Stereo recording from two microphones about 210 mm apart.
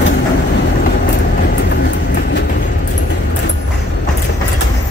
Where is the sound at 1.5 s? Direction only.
55° left (ahead or behind).